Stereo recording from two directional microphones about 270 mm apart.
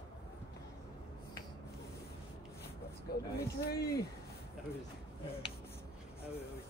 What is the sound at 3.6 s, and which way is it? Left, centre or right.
Speech, left.